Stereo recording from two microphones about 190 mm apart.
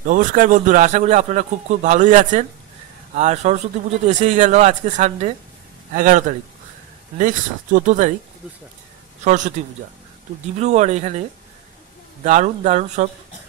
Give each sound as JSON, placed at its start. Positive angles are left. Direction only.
{"t": 0.0, "sound": "a man's voice", "side_deg": -45}
{"t": 9.2, "sound": "a man's voice", "side_deg": -40}
{"t": 10.6, "sound": "a man's voice", "side_deg": -35}